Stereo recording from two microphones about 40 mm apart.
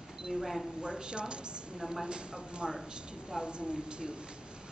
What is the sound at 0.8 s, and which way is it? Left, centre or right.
Speech, right.